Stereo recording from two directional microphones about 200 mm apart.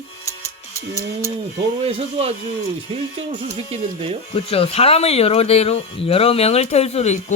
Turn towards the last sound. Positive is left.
turn(degrees=35)  # may be behind; listen again after turning